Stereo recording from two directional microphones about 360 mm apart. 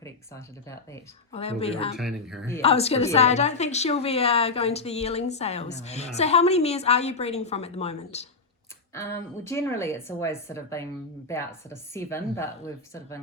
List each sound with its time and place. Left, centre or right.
0.0 s a woman's voice: centre
2.0 s speech: centre
2.6 s a woman's voice: centre
9.0 s a woman's voice: centre